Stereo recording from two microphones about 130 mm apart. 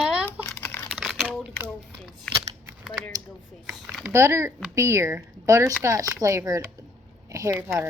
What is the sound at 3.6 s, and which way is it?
Speech, 5° right (ahead or behind).